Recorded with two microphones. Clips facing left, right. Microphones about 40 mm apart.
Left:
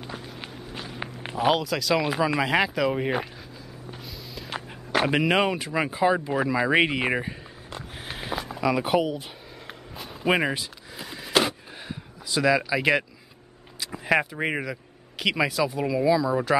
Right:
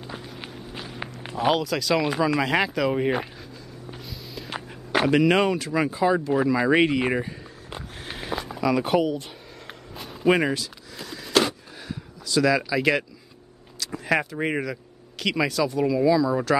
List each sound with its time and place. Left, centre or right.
0.1 s walk: centre
1.3 s speech: centre
3.9 s walk: centre
5.0 s speech: centre
6.3 s speech: centre
8.0 s a sound: centre
10.5 s a sound: centre
12.3 s speech: centre